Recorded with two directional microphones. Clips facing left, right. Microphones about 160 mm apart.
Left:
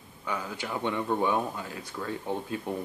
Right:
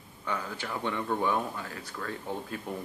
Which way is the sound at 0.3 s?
10° left (ahead or behind).